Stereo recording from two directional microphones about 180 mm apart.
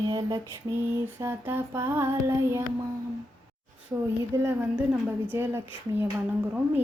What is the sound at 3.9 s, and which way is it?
Speech, 10° right (ahead or behind).